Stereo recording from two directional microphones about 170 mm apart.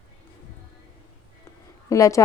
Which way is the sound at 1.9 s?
20° left (ahead or behind).